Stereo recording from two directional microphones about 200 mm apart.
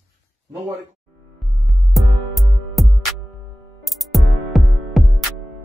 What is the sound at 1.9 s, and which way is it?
Music, centre (ahead or behind).